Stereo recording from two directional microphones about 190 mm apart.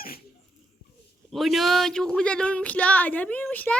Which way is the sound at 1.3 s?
Centre (ahead or behind).